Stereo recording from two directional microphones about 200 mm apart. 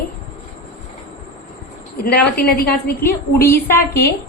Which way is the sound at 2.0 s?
50° left (ahead or behind).